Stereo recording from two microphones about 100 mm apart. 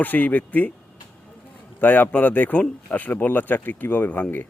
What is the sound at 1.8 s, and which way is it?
Speech, 15° left (ahead or behind).